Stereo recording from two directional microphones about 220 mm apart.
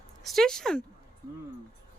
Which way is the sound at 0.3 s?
Centre (ahead or behind).